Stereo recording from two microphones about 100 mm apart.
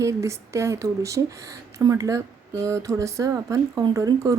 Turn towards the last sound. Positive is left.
turn(degrees=-35)  # may be behind; listen again after turning